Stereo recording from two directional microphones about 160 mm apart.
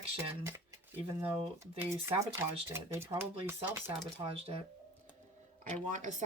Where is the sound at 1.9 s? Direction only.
15° right (ahead or behind).